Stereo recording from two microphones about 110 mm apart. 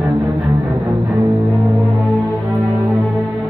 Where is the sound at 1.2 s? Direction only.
25° right (ahead or behind).